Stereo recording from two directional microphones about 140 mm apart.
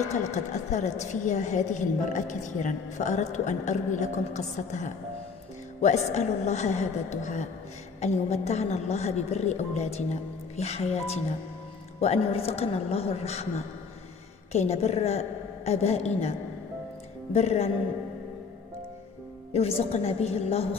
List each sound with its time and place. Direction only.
0.0 s a woman's voice: 55° left (ahead or behind)
14.5 s a woman's voice: 50° left (ahead or behind)
19.5 s a woman's voice: 45° left (ahead or behind)